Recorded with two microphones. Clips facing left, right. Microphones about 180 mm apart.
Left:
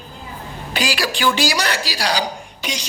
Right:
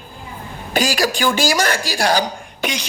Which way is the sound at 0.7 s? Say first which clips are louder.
Right 4 dB; 45° right (ahead or behind).